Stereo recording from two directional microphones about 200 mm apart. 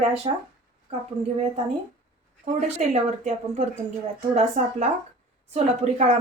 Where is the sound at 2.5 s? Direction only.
35° right (ahead or behind).